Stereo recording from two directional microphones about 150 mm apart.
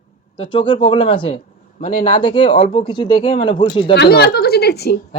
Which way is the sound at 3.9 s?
90° left.